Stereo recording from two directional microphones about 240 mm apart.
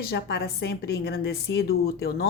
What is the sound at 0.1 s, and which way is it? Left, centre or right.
A woman's voice, left.